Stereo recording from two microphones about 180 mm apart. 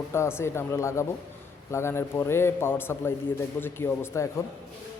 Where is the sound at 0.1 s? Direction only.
15° left (ahead or behind).